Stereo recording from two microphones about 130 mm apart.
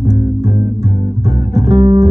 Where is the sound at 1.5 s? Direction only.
60° right (ahead or behind).